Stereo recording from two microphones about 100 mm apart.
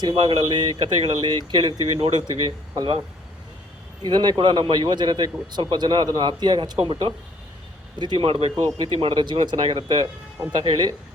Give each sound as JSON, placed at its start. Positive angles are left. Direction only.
{"t": 0.2, "sound": "a man's voice", "side_deg": -50}
{"t": 4.0, "sound": "a man's voice", "side_deg": -45}
{"t": 6.7, "sound": "speech", "side_deg": -65}
{"t": 7.9, "sound": "speech", "side_deg": -50}
{"t": 8.5, "sound": "a man's voice", "side_deg": -55}